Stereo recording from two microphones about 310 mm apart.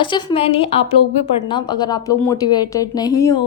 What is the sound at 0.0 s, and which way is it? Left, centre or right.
A woman's voice, centre.